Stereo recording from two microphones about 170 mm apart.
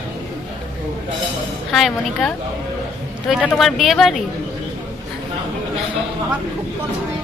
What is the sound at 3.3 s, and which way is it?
Speech, 5° right (ahead or behind).